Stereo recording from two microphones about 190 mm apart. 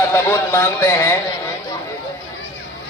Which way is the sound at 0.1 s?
15° left (ahead or behind).